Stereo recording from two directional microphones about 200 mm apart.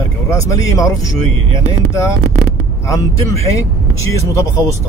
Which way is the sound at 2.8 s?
15° left (ahead or behind).